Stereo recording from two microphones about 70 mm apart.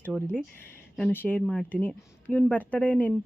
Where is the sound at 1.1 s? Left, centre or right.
Left.